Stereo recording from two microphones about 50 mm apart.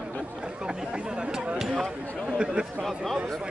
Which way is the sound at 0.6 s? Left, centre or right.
Centre.